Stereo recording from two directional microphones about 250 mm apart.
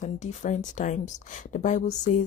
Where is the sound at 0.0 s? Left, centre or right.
Left.